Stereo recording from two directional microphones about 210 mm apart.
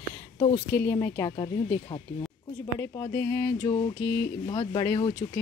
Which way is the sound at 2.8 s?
15° left (ahead or behind).